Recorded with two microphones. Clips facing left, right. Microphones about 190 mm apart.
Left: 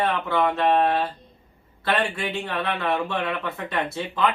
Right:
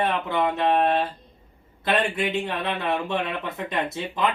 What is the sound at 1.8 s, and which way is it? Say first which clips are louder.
Speech: right 1 dB; 20° right (ahead or behind).